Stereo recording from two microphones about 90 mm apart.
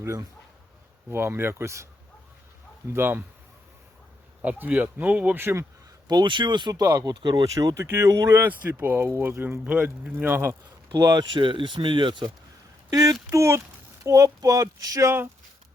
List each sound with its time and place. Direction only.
0.0 s speech: 40° right (ahead or behind)
1.1 s speech: 25° right (ahead or behind)
2.9 s speech: 25° right (ahead or behind)
4.4 s speech: 20° right (ahead or behind)
6.1 s speech: 55° right (ahead or behind)
7.4 s speech: 40° right (ahead or behind)
7.8 s speech: 30° right (ahead or behind)
8.3 s speech: 20° right (ahead or behind)
9.6 s speech: 15° right (ahead or behind)
10.9 s speech: 45° right (ahead or behind); by 12.3 s 60° right (ahead or behind)
12.9 s speech: 40° right (ahead or behind)